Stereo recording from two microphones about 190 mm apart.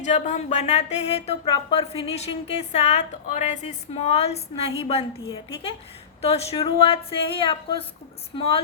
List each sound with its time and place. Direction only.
0.0 s a woman's voice: 35° left (ahead or behind)
6.2 s a woman's voice: 30° left (ahead or behind)